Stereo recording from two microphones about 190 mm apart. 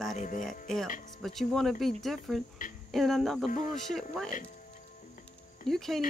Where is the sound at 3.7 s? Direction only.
Centre (ahead or behind).